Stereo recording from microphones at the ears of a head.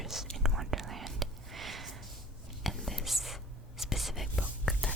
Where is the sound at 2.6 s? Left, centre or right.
Centre.